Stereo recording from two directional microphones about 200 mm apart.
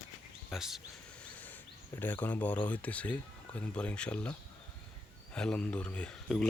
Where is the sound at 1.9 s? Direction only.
10° left (ahead or behind).